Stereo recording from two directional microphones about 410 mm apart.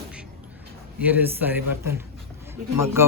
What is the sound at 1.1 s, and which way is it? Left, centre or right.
Speech, centre.